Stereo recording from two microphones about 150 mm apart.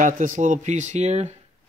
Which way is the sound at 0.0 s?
60° right (ahead or behind).